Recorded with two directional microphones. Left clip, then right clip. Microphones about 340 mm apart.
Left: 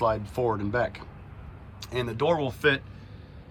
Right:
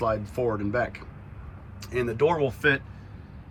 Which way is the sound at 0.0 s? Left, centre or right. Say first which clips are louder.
Left 1 dB; centre.